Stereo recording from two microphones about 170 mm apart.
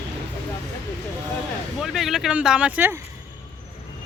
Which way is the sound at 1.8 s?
Centre (ahead or behind).